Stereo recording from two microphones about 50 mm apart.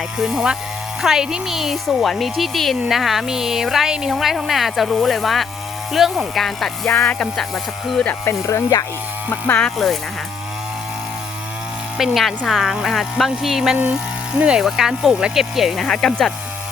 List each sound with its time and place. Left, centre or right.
0.2 s speech: centre
7.0 s speech: left
7.3 s speech: centre
8.2 s speech: left
9.7 s speech: centre
11.9 s speech: centre
14.3 s speech: right
14.6 s speech: centre
15.8 s speech: centre